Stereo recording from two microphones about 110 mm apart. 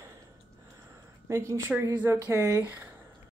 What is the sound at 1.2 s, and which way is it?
Speech, 30° right (ahead or behind).